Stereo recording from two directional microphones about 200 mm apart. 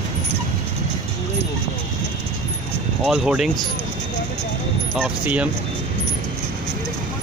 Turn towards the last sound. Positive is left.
turn(degrees=-5)  # may be behind; listen again after turning